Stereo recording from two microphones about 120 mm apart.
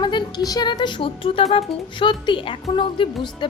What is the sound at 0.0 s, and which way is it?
Music, 40° left (ahead or behind).